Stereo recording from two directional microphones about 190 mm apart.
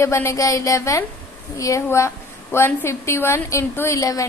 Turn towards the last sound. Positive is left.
turn(degrees=15)  # may be behind; listen again after turning